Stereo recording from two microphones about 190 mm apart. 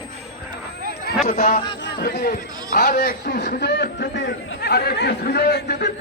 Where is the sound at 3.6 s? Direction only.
60° left (ahead or behind).